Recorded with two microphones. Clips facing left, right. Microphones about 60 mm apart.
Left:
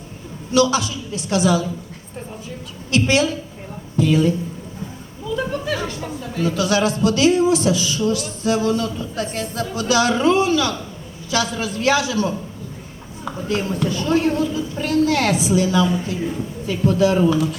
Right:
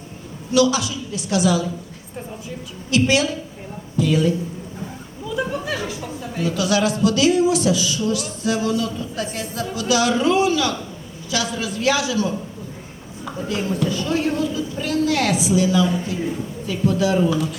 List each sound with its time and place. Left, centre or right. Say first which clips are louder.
0.5 s speech: even; left
2.9 s a woman's voice: even; left
6.4 s speech: left 1 dB; left
13.5 s a woman's voice: left 1 dB; left